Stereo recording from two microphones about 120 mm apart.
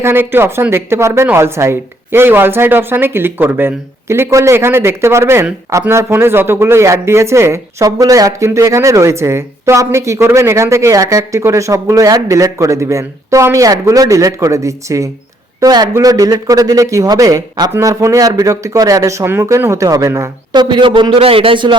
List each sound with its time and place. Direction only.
0.0 s speech: 20° right (ahead or behind)
20.5 s a man's voice: 40° right (ahead or behind)